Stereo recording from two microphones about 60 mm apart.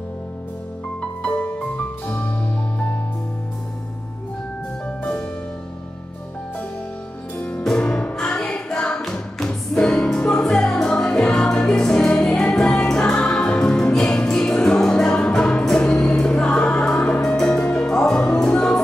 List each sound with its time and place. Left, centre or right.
1.2 s music: left
4.8 s music: left
7.3 s music: left